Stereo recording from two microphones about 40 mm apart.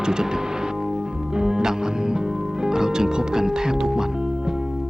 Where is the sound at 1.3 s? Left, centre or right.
Centre.